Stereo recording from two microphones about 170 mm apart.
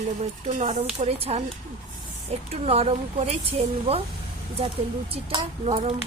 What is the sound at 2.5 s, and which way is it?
Speech, 35° right (ahead or behind).